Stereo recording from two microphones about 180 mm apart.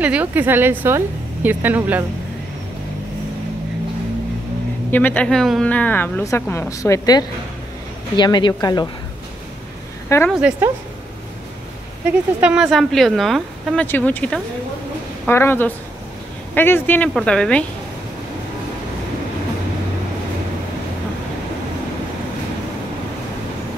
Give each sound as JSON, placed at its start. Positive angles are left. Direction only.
{"t": 0.0, "sound": "a woman's voice", "side_deg": -10}
{"t": 4.9, "sound": "speech", "side_deg": 10}
{"t": 10.0, "sound": "a woman's voice", "side_deg": 15}
{"t": 10.3, "sound": "a woman's voice", "side_deg": -5}
{"t": 12.1, "sound": "speech", "side_deg": -5}